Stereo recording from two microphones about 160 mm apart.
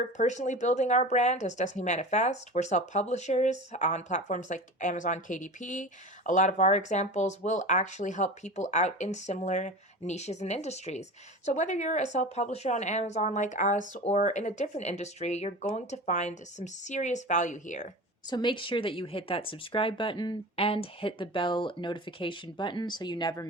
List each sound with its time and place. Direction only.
0.2 s speech: 50° left (ahead or behind)
18.3 s speech: 30° left (ahead or behind)